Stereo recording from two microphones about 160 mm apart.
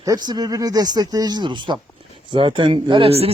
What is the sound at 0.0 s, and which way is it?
Speech, 25° right (ahead or behind).